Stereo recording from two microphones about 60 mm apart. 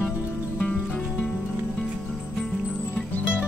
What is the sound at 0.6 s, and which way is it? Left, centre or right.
Music, centre.